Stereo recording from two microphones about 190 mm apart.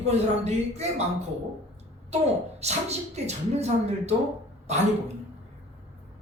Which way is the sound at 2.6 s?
35° right (ahead or behind).